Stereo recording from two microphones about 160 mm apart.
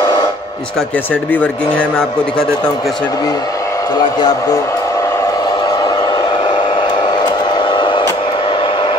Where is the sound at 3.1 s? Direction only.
25° left (ahead or behind).